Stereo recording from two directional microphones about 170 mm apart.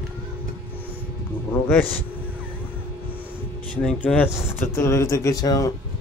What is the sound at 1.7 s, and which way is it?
Speech, 10° left (ahead or behind).